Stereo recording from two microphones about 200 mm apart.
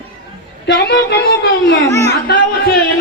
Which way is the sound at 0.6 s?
55° left (ahead or behind).